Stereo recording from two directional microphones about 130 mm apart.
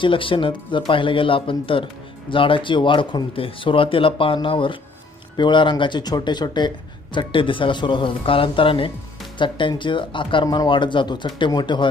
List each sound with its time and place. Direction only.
0.0 s speech: 40° left (ahead or behind)